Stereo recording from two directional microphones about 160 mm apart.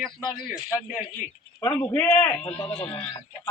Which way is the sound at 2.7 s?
30° left (ahead or behind).